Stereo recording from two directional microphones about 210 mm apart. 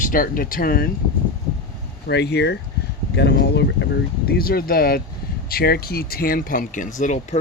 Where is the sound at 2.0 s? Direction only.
50° left (ahead or behind).